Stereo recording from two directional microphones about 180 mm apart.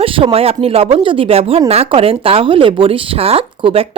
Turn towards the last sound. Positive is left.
turn(degrees=-30)  # may be behind; listen again after turning